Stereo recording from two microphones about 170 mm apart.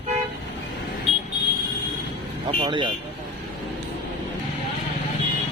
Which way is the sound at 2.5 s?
30° right (ahead or behind).